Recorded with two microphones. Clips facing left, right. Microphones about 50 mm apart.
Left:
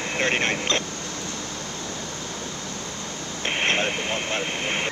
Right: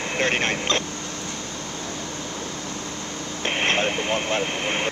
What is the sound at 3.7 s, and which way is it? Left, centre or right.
Vehicle, centre.